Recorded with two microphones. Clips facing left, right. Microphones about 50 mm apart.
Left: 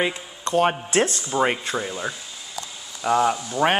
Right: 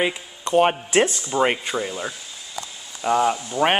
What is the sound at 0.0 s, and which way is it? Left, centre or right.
Speech, centre.